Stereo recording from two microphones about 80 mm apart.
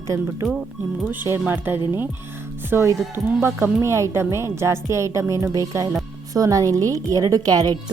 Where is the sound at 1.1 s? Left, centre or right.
Right.